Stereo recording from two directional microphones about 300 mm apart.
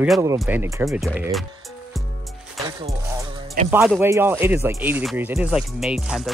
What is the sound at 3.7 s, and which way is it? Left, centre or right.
Speech, centre.